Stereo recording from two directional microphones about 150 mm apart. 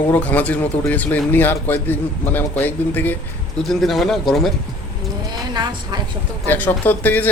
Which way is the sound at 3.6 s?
Centre (ahead or behind).